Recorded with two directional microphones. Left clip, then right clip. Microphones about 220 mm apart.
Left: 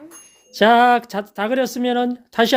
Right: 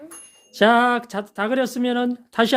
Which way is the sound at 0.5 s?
5° left (ahead or behind).